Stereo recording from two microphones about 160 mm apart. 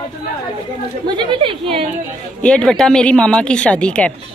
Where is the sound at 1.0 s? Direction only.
30° right (ahead or behind).